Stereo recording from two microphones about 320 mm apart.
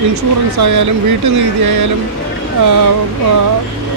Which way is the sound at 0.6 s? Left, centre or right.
Right.